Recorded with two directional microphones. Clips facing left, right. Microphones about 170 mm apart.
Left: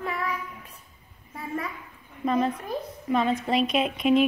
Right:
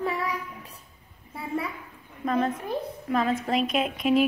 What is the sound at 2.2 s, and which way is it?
A woman's voice, 5° left (ahead or behind).